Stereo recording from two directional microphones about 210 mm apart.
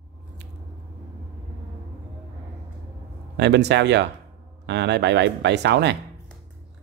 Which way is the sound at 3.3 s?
55° right (ahead or behind).